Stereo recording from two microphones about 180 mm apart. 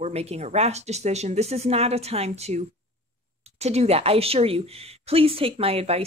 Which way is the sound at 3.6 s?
35° right (ahead or behind).